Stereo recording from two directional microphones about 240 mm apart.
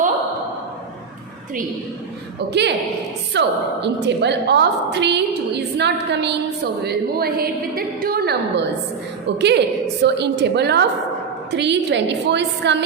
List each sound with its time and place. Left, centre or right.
2.5 s a woman's voice: right